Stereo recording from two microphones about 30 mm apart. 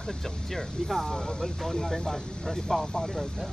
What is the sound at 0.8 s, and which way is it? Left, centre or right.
Speech, centre.